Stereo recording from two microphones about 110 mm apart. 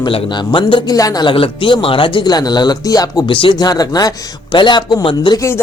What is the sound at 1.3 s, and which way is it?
A man's voice, 55° left (ahead or behind).